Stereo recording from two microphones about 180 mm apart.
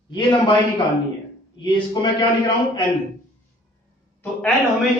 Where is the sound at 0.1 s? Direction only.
25° left (ahead or behind).